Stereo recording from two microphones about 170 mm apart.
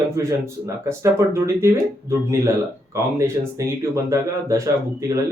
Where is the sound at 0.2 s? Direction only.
15° right (ahead or behind).